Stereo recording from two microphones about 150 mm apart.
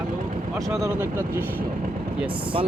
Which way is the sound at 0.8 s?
15° right (ahead or behind).